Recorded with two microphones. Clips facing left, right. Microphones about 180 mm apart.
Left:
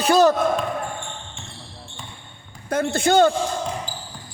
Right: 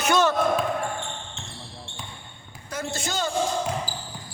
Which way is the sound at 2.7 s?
55° left (ahead or behind).